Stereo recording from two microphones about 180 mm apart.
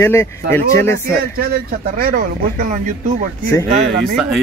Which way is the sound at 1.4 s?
55° right (ahead or behind).